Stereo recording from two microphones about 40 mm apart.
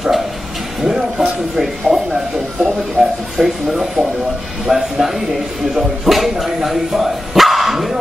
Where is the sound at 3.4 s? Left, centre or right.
Centre.